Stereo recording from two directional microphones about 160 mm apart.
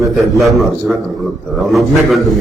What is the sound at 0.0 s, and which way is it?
A man's voice, centre (ahead or behind).